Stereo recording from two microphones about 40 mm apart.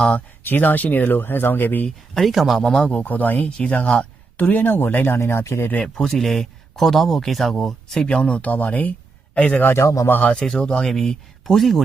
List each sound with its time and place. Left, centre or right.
0.5 s speech: left
2.1 s speech: centre
2.6 s speech: centre
3.0 s speech: left
3.4 s speech: left
4.4 s speech: left
5.0 s speech: left
5.8 s speech: centre
7.9 s speech: left
9.6 s speech: left
10.4 s speech: left
10.8 s speech: centre